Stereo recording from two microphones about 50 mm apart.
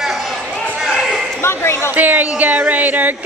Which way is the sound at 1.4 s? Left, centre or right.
Left.